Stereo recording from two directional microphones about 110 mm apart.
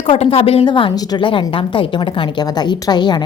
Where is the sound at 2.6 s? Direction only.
40° left (ahead or behind).